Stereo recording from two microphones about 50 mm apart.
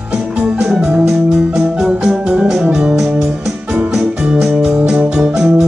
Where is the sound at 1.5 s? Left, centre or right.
Centre.